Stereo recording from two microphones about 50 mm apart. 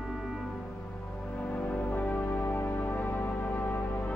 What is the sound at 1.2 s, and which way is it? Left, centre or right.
Music, left.